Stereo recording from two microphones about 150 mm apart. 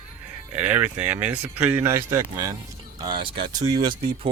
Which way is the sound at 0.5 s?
10° right (ahead or behind).